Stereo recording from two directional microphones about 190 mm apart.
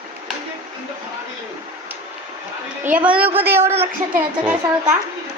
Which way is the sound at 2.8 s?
10° right (ahead or behind).